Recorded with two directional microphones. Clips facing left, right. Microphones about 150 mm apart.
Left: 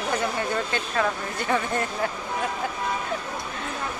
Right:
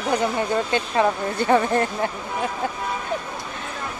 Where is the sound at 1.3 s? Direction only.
35° right (ahead or behind).